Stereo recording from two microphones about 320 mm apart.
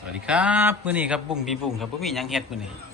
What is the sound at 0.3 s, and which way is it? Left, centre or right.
A man's voice, centre.